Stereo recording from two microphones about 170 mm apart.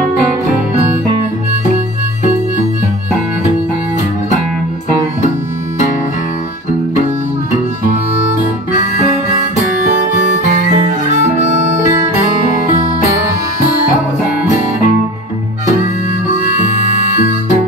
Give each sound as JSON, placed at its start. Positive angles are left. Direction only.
{"t": 10.6, "sound": "music", "side_deg": -45}